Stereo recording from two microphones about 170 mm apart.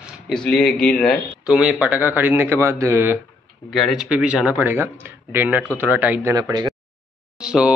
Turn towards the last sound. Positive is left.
turn(degrees=-5)  # may be behind; listen again after turning